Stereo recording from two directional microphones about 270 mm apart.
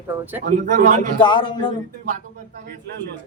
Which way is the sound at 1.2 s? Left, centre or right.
Centre.